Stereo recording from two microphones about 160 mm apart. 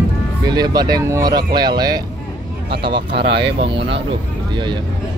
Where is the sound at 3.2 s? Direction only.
90° right.